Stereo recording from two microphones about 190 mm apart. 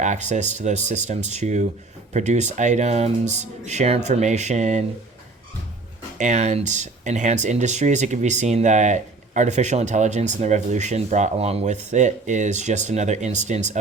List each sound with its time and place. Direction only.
0.0 s speech: 40° right (ahead or behind)
6.1 s speech: 40° right (ahead or behind)